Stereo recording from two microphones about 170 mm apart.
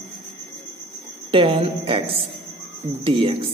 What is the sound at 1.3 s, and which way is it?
A woman's voice, 30° right (ahead or behind).